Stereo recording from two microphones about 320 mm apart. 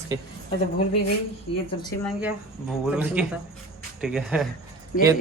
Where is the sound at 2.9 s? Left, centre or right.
Centre.